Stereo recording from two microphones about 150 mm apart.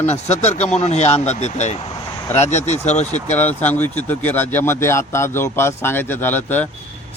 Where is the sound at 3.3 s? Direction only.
10° left (ahead or behind).